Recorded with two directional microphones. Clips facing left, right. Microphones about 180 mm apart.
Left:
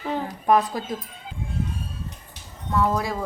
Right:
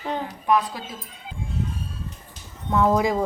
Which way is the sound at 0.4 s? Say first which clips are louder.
Left 2 dB; 45° left (ahead or behind).